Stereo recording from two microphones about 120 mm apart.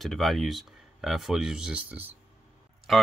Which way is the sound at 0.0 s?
Centre (ahead or behind).